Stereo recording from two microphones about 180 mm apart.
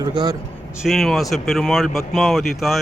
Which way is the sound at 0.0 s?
25° right (ahead or behind).